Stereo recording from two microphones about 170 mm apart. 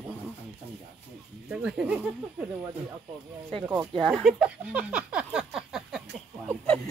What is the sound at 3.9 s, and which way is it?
Speech, centre (ahead or behind).